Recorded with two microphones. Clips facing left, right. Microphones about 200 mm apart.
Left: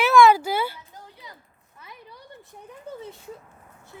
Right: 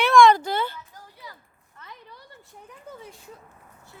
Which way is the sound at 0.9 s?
20° left (ahead or behind).